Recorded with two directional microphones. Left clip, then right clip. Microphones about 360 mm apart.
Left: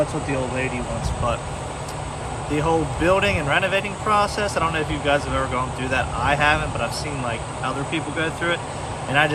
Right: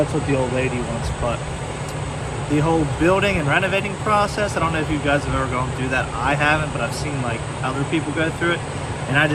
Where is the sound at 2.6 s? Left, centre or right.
Centre.